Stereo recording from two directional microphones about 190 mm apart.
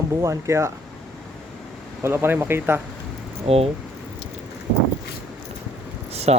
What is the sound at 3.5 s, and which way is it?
Speech, 30° right (ahead or behind).